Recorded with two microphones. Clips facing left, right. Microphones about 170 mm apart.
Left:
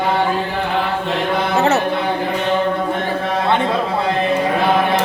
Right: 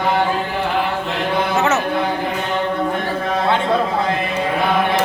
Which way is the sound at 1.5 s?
35° left (ahead or behind).